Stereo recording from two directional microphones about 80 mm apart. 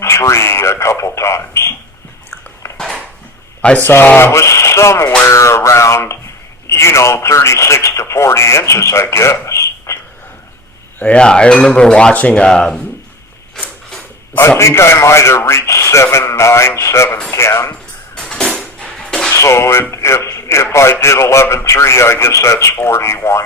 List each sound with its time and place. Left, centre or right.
0.0 s speech: left
2.7 s a sound: centre
3.6 s speech: centre
3.8 s a sound: left
4.3 s a man's voice: left
11.0 s speech: centre
14.6 s a man's voice: left
18.2 s music: centre
19.3 s speech: left
19.9 s a sound: left
20.7 s a man's voice: left